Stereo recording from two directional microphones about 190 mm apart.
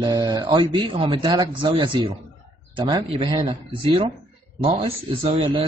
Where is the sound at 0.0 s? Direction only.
20° right (ahead or behind).